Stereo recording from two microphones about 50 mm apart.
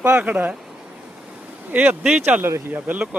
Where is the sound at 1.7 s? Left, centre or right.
Right.